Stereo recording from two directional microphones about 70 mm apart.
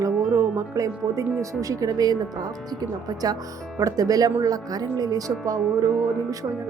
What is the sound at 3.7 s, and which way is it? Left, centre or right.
Speech, right.